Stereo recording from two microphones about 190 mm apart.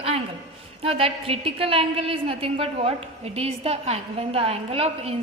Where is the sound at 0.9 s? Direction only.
30° right (ahead or behind).